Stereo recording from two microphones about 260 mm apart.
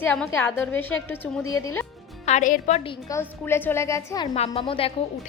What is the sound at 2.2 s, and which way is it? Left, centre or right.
Speech, left.